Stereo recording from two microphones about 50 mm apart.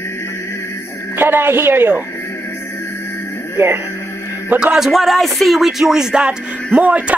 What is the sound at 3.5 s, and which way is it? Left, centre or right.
Speech, right.